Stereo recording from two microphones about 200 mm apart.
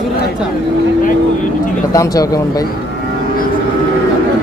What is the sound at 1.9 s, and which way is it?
Speech, 15° left (ahead or behind).